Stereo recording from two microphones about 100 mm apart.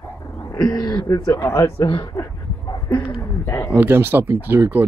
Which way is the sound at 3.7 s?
20° right (ahead or behind).